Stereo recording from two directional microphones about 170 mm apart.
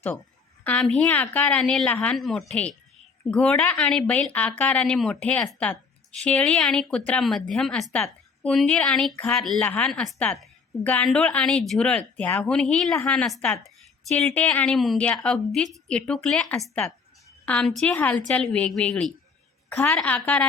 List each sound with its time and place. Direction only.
0.6 s a woman's voice: 5° left (ahead or behind)